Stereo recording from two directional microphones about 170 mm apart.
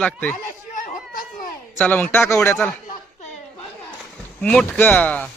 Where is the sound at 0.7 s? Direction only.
50° left (ahead or behind).